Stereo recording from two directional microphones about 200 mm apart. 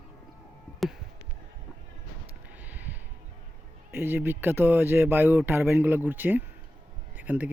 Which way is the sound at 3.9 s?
10° right (ahead or behind).